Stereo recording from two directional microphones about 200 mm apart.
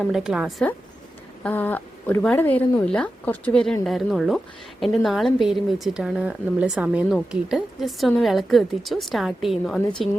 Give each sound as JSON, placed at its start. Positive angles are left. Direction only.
{"t": 0.0, "sound": "a woman's voice", "side_deg": -5}
{"t": 1.5, "sound": "a woman's voice", "side_deg": 10}